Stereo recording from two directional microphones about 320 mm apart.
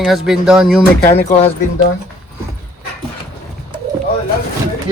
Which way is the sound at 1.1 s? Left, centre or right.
Centre.